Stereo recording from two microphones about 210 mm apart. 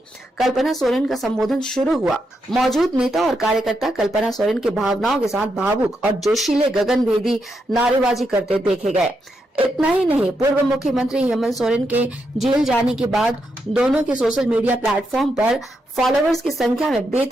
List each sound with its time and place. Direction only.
0.3 s speech: centre (ahead or behind)
8.6 s speech: 35° right (ahead or behind)
9.6 s speech: centre (ahead or behind)